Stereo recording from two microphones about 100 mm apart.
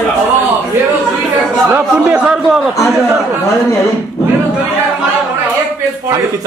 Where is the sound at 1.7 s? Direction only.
10° right (ahead or behind).